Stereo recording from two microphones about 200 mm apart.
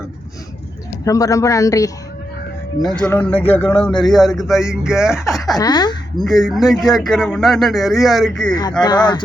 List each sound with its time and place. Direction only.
1.0 s speech: 15° left (ahead or behind)
2.8 s a man's voice: 5° left (ahead or behind)
5.5 s speech: 20° left (ahead or behind)
6.2 s a man's voice: centre (ahead or behind)
8.8 s speech: 20° left (ahead or behind)